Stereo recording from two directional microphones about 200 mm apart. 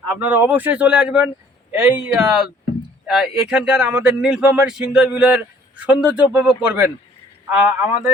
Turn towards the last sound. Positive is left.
turn(degrees=-5)  # may be behind; listen again after turning